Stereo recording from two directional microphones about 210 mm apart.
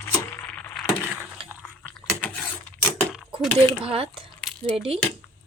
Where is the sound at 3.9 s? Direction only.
25° right (ahead or behind).